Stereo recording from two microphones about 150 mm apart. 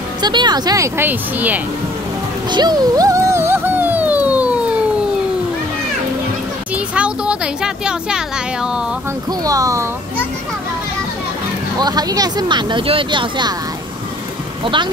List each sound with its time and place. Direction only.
0.2 s speech: 30° right (ahead or behind)
0.9 s speech: 10° right (ahead or behind)
2.5 s music: 30° right (ahead or behind); by 4.6 s 10° right (ahead or behind)
6.7 s a sound: 10° right (ahead or behind)
9.4 s speech: 25° right (ahead or behind)
11.8 s speech: 25° right (ahead or behind)
14.6 s speech: 35° right (ahead or behind)